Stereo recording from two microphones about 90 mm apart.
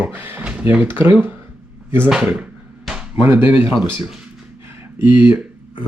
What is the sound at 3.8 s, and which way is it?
Speech, 10° right (ahead or behind).